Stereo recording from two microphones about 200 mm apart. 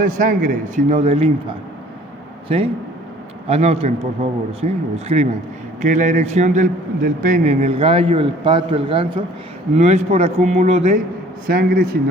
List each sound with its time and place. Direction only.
0.0 s a man's voice: 40° right (ahead or behind)
11.4 s speech: 50° right (ahead or behind)